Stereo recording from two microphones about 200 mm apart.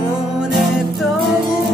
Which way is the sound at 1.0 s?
Centre (ahead or behind).